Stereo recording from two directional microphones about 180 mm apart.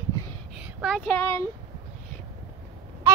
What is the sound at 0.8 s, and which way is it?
Speech, 5° left (ahead or behind).